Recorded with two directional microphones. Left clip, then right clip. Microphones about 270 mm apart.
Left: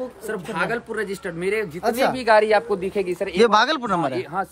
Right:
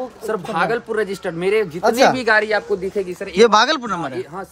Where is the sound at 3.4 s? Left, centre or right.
Centre.